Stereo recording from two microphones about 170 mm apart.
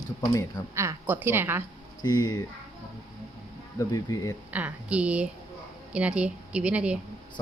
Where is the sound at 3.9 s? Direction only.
20° left (ahead or behind).